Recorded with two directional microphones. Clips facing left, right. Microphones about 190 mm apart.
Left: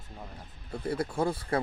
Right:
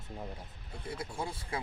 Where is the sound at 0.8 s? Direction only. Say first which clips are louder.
Left 10 dB; 60° left (ahead or behind).